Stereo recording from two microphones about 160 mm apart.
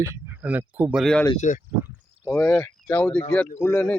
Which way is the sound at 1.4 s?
50° left (ahead or behind).